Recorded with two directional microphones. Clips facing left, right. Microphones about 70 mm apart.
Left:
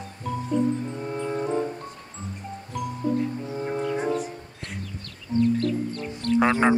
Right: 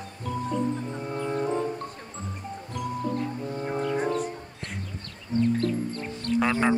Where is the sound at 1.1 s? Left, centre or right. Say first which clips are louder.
Even; centre.